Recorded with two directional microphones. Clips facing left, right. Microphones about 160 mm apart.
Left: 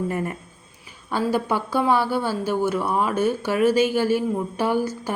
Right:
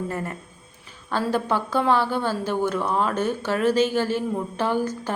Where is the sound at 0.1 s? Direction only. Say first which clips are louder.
Left 3 dB; 15° left (ahead or behind).